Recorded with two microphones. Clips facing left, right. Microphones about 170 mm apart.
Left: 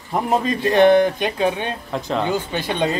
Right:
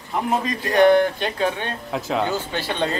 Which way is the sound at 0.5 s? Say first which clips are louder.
Left 2 dB; 20° left (ahead or behind).